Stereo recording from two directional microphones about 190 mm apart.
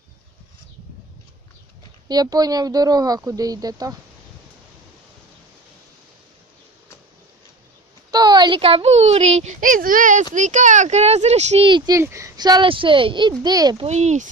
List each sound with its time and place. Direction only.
2.0 s speech: 20° right (ahead or behind)
8.1 s a child's voice: 20° right (ahead or behind)
13.8 s speech: 35° right (ahead or behind)